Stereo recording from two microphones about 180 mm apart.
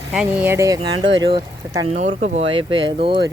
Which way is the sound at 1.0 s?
90° right.